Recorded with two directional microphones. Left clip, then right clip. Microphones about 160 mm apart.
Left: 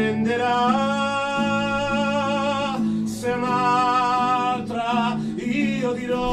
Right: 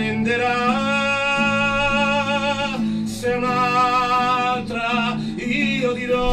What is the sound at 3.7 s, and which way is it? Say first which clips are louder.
Music: right 2 dB; 10° left (ahead or behind).